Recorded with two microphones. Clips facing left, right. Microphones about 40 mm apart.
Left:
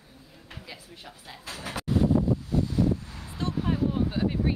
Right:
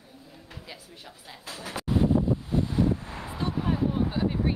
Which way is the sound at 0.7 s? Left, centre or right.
Left.